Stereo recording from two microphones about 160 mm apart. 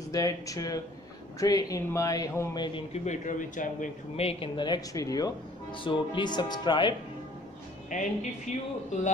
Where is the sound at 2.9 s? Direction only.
45° left (ahead or behind).